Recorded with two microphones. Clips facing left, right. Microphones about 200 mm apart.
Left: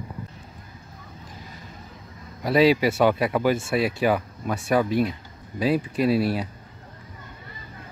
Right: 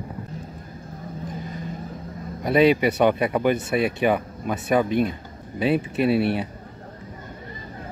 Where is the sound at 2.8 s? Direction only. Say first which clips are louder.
Right 1 dB; centre (ahead or behind).